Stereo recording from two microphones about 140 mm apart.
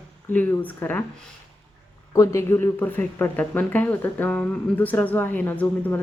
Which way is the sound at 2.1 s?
20° left (ahead or behind).